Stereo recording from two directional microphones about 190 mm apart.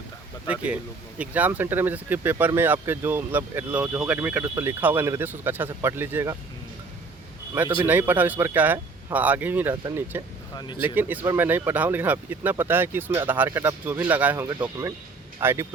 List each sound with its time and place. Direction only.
0.4 s speech: 5° right (ahead or behind)
7.5 s speech: 10° right (ahead or behind)
10.5 s speech: 20° left (ahead or behind)
10.8 s speech: 10° right (ahead or behind)